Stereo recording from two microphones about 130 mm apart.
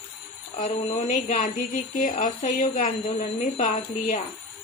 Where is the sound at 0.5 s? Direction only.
70° left (ahead or behind); by 2.9 s 90° left.